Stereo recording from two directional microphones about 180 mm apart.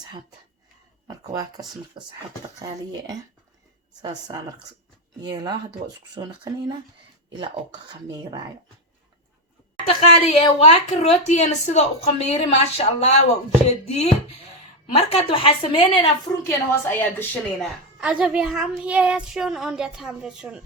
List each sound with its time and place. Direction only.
1.0 s speech: 20° right (ahead or behind)
5.2 s speech: 20° right (ahead or behind)
9.8 s a woman's voice: 35° left (ahead or behind); by 17.7 s 10° left (ahead or behind)
18.0 s speech: 5° right (ahead or behind)